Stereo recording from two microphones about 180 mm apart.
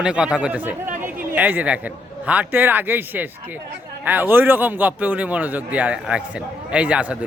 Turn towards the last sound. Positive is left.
turn(degrees=-5)  # may be behind; listen again after turning